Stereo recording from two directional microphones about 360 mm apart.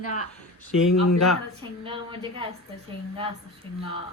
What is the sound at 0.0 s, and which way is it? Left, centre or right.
Speech, centre.